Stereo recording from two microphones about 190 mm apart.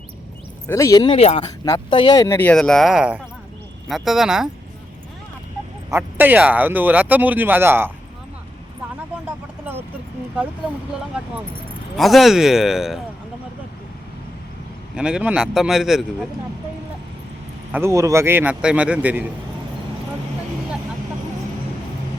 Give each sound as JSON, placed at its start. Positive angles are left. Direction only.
{"t": 0.7, "sound": "speech", "side_deg": 15}
{"t": 1.5, "sound": "speech", "side_deg": 20}
{"t": 5.9, "sound": "speech", "side_deg": -10}
{"t": 11.9, "sound": "speech", "side_deg": 0}
{"t": 14.9, "sound": "speech", "side_deg": -5}
{"t": 17.7, "sound": "speech", "side_deg": -15}